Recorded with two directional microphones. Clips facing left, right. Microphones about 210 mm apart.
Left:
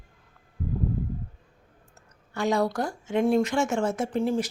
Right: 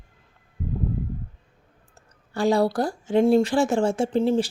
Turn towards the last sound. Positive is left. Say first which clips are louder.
# right 5 dB
turn(degrees=-30)  # may be behind; listen again after turning